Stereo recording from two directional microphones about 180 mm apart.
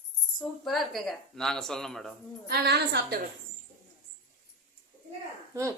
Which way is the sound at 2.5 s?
65° right (ahead or behind).